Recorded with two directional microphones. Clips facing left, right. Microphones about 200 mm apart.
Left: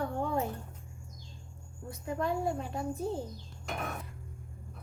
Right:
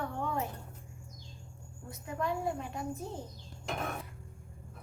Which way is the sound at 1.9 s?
35° left (ahead or behind).